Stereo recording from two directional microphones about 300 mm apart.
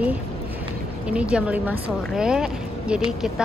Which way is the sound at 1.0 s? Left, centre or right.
Centre.